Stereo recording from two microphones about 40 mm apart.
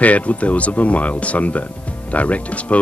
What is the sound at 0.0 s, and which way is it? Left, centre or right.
Speech, left.